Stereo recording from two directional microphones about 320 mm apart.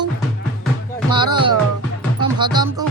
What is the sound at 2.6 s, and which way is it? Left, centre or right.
Music, centre.